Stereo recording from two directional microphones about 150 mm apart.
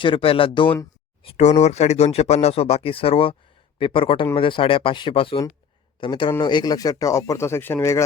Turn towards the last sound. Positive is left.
turn(degrees=15)  # may be behind; listen again after turning